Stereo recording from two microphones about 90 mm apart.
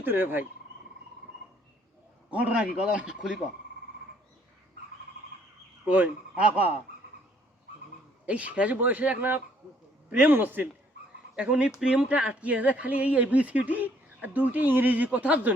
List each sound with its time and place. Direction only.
0.0 s speech: 20° right (ahead or behind)
2.3 s speech: 15° right (ahead or behind)
5.9 s speech: 15° right (ahead or behind)
8.3 s speech: 15° right (ahead or behind)